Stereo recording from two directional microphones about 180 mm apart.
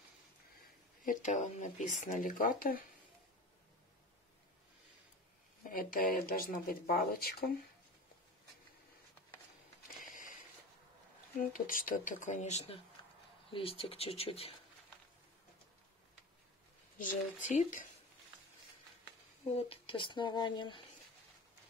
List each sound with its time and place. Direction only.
1.0 s speech: 40° left (ahead or behind)
5.6 s speech: 55° left (ahead or behind)
10.0 s a sound: 45° left (ahead or behind)
11.3 s speech: 50° left (ahead or behind); by 14.5 s 35° left (ahead or behind)
17.5 s speech: 45° left (ahead or behind)
19.5 s speech: 30° left (ahead or behind)